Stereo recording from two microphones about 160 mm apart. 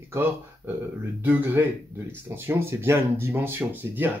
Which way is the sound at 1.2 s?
15° right (ahead or behind).